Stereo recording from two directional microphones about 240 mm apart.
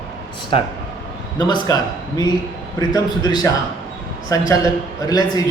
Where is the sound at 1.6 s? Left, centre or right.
Centre.